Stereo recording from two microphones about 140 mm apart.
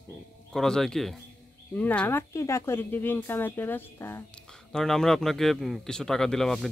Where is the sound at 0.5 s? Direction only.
5° left (ahead or behind).